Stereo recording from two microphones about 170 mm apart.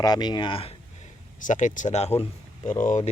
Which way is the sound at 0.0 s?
25° left (ahead or behind).